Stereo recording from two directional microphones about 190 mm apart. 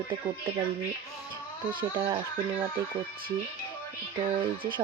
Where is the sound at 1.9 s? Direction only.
25° right (ahead or behind).